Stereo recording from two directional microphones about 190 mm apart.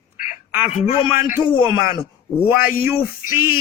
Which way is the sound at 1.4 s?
25° left (ahead or behind).